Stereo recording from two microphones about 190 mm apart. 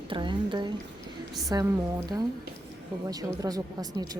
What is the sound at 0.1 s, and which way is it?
Speech, 25° right (ahead or behind).